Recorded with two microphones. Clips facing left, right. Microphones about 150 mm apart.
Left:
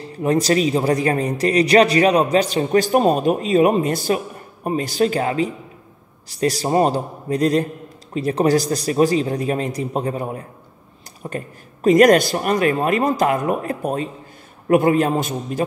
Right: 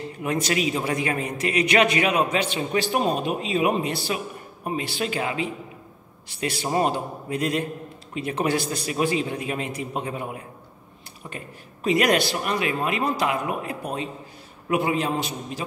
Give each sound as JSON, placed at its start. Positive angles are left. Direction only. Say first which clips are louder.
{"t": 0.0, "sound": "a man's voice", "louder": "left 7 dB", "side_deg": 35}